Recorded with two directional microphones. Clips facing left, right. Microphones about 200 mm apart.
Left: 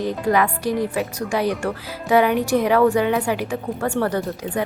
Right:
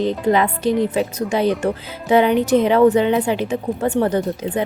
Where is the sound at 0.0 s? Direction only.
25° right (ahead or behind).